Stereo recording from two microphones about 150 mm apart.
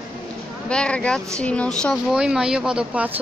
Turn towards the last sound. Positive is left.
turn(degrees=-10)  # may be behind; listen again after turning